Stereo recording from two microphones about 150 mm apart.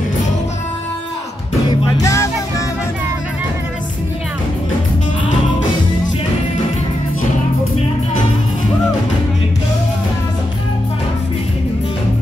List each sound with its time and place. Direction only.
1.7 s music: 20° left (ahead or behind)